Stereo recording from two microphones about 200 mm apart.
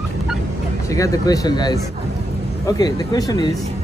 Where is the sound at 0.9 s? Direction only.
15° left (ahead or behind).